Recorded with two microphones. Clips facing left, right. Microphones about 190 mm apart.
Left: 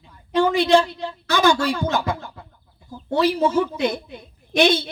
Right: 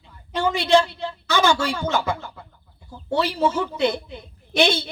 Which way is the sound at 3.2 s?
15° left (ahead or behind).